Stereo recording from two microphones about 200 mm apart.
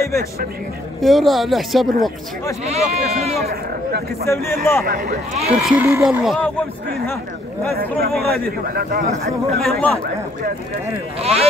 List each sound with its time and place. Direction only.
1.0 s speech: centre (ahead or behind)
2.6 s speech: 30° right (ahead or behind)
3.4 s speech: 50° right (ahead or behind)
4.3 s a man's voice: 10° left (ahead or behind)
4.8 s a man's voice: 45° right (ahead or behind)
5.5 s speech: 5° right (ahead or behind)
7.7 s a man's voice: 50° right (ahead or behind)
9.6 s speech: 5° left (ahead or behind)
11.1 s speech: 30° right (ahead or behind)